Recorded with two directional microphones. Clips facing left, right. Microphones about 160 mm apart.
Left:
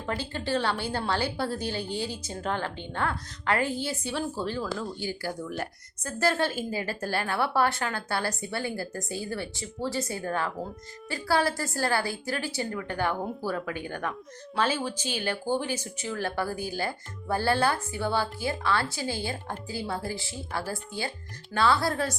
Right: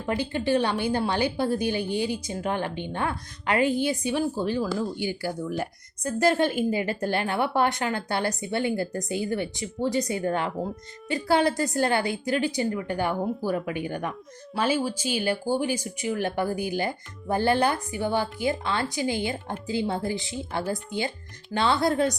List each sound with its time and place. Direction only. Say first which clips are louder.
0.0 s a woman's voice: right 5 dB; 20° right (ahead or behind)